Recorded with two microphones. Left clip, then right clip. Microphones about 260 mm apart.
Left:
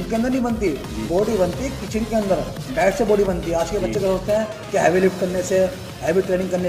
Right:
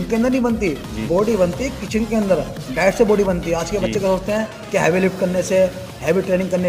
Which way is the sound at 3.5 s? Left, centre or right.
Right.